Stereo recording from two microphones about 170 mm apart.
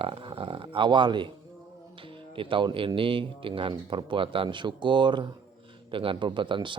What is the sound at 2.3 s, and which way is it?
A man's voice, 30° right (ahead or behind).